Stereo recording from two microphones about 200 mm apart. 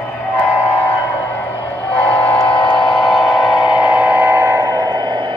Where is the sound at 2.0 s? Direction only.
5° left (ahead or behind).